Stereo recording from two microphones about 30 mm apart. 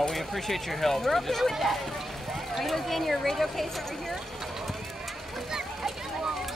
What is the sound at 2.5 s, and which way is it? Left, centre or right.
Speech, centre.